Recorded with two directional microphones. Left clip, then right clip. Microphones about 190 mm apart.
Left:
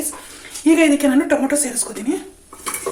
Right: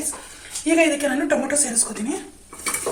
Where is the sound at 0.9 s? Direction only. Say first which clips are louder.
Left 4 dB; 45° left (ahead or behind).